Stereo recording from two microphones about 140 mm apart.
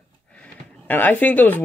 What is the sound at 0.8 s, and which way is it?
Speech, 10° left (ahead or behind).